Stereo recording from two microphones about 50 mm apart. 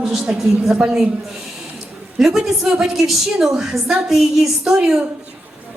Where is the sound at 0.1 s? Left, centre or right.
Centre.